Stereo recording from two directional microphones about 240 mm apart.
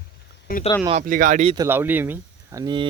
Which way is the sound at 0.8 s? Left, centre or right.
Right.